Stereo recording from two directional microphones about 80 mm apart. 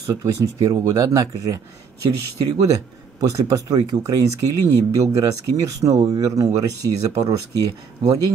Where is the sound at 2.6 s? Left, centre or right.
Right.